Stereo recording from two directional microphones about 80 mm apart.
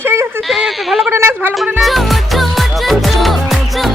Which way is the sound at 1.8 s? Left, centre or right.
Centre.